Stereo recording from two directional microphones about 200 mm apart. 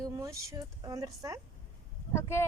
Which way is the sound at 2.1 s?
15° left (ahead or behind).